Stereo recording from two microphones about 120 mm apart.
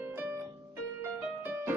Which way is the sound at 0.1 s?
15° right (ahead or behind).